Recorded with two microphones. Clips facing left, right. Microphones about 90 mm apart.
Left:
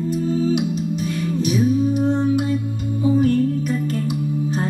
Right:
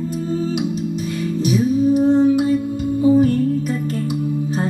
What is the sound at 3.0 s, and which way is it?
Music, 40° right (ahead or behind).